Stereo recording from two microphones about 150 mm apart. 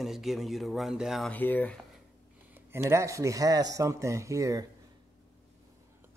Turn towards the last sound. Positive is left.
turn(degrees=-20)  # may be behind; listen again after turning